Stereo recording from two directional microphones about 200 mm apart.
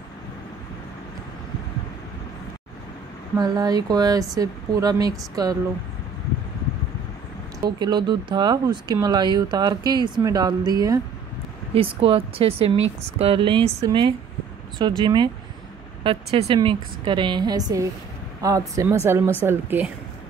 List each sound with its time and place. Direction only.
3.3 s speech: 20° right (ahead or behind)
7.6 s speech: 20° right (ahead or behind)
19.0 s speech: 15° right (ahead or behind)